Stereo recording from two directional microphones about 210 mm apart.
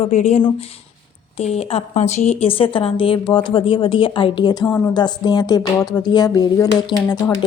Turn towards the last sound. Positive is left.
turn(degrees=15)  # may be behind; listen again after turning